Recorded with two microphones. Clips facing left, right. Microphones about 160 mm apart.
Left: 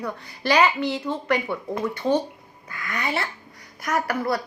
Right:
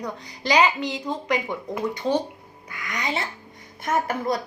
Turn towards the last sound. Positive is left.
turn(degrees=-20)  # may be behind; listen again after turning